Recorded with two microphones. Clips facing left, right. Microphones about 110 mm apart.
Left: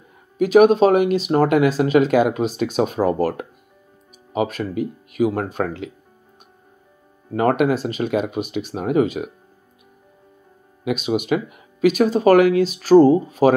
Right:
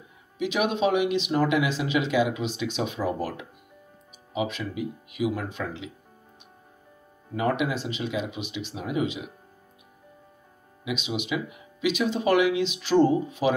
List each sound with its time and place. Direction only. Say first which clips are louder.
0.4 s speech: left 12 dB; 45° left (ahead or behind)
7.3 s speech: left 8 dB; 55° left (ahead or behind)
10.8 s speech: left 9 dB; 50° left (ahead or behind)